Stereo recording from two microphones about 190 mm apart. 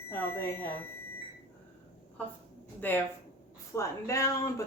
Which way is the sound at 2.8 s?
10° left (ahead or behind).